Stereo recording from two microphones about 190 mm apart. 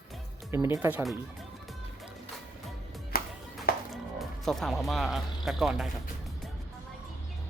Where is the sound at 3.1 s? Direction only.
50° left (ahead or behind).